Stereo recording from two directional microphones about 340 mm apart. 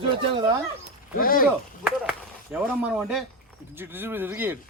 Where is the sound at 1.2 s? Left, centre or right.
Left.